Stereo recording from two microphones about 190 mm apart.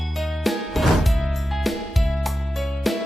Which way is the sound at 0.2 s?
Centre (ahead or behind).